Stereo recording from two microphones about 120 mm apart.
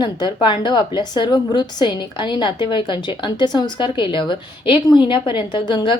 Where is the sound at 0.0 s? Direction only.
40° left (ahead or behind).